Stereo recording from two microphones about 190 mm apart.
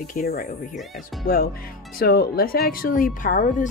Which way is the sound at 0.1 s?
45° left (ahead or behind).